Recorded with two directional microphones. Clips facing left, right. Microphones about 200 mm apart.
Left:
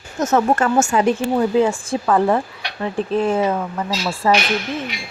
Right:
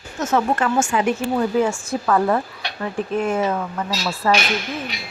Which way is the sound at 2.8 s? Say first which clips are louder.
Left 3 dB; 30° left (ahead or behind).